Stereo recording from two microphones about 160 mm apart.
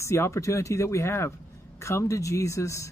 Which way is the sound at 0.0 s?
15° left (ahead or behind).